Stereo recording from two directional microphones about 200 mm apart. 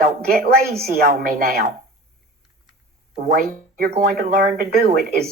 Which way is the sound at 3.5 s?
45° right (ahead or behind).